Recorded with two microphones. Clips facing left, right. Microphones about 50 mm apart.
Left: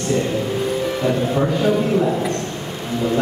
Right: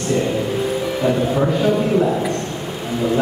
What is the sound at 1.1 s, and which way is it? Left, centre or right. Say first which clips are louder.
A man's voice: right 2 dB; centre.